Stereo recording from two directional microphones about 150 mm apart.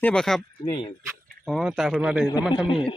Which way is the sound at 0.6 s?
30° left (ahead or behind).